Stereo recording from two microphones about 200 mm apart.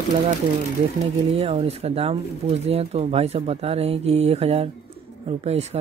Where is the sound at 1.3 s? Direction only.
30° right (ahead or behind).